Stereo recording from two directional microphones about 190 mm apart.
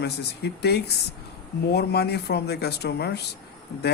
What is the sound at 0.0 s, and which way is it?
Speech, 60° left (ahead or behind).